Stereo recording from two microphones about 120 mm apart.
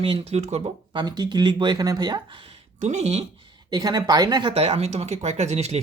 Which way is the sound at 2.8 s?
65° right (ahead or behind).